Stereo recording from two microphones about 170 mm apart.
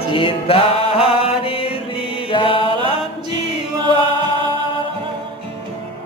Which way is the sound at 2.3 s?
30° left (ahead or behind).